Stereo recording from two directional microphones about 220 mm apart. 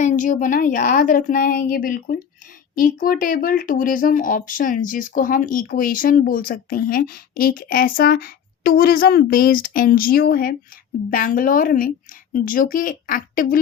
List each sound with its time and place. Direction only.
0.0 s speech: 35° left (ahead or behind)